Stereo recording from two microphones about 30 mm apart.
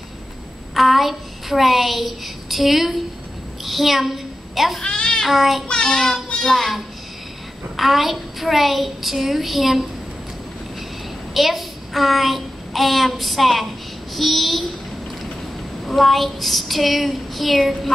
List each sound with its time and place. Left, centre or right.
0.7 s a child's voice: centre
4.8 s a sound: left
5.3 s a woman's voice: centre
5.8 s child singing: centre
6.4 s a woman's voice: centre
11.3 s a child's voice: centre
15.8 s a woman's voice: centre